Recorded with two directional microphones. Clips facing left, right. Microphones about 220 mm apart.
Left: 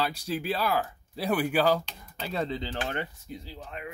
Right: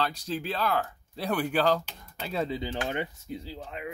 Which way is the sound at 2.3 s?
5° right (ahead or behind).